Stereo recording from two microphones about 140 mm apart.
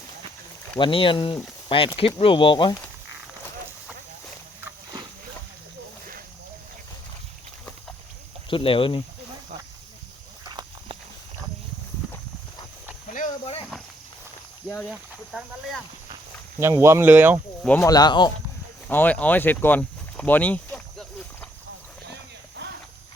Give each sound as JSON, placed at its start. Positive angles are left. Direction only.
{"t": 0.8, "sound": "speech", "side_deg": 35}
{"t": 8.4, "sound": "speech", "side_deg": 40}
{"t": 10.5, "sound": "walk", "side_deg": -30}
{"t": 14.8, "sound": "speech", "side_deg": -5}
{"t": 16.6, "sound": "speech", "side_deg": -20}
{"t": 17.7, "sound": "speech", "side_deg": 25}
{"t": 18.9, "sound": "speech", "side_deg": 10}